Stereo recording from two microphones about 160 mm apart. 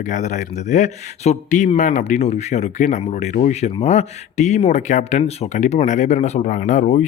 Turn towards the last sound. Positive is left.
turn(degrees=45)  # may be behind; listen again after turning